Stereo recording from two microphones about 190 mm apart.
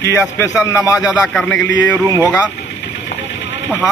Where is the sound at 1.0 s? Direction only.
5° right (ahead or behind).